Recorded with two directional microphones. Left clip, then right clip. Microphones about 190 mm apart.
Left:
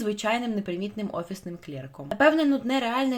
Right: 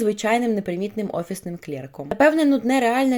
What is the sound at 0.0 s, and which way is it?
Speech, 30° right (ahead or behind).